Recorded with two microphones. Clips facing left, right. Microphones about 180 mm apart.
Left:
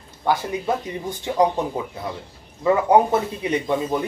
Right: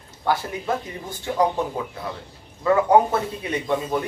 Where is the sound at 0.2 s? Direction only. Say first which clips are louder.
Left 2 dB; 15° left (ahead or behind).